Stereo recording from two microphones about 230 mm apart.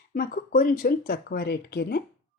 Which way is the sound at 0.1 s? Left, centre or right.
Left.